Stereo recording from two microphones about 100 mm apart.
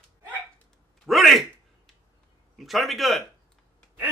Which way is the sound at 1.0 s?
Centre (ahead or behind).